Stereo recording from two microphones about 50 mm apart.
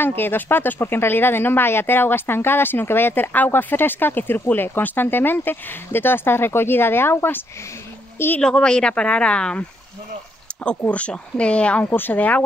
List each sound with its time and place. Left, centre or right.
0.0 s speech: left
8.4 s a woman's voice: centre
10.5 s a sound: left
10.9 s speech: left
11.8 s speech: left